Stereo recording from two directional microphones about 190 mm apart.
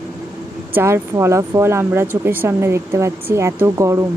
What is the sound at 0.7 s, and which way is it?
Speech, 15° right (ahead or behind).